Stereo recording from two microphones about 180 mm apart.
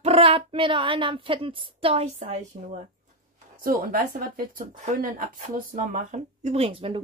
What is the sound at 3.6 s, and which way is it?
Speech, 50° right (ahead or behind).